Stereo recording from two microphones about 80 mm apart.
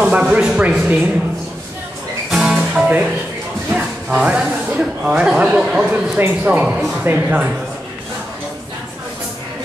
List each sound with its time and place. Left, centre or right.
0.0 s speech: centre
2.3 s music: centre
2.7 s music: centre
3.7 s speech: centre
6.1 s speech: right